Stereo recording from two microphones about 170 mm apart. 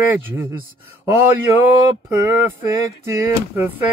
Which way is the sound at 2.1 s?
15° right (ahead or behind).